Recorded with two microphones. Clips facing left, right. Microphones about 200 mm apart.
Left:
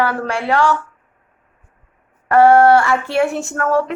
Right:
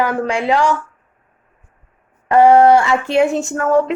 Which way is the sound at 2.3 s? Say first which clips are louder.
Right 1 dB; 15° right (ahead or behind).